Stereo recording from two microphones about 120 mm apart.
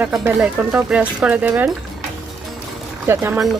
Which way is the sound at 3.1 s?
20° right (ahead or behind).